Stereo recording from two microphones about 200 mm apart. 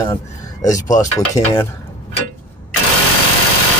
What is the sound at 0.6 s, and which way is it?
Speech, 20° left (ahead or behind).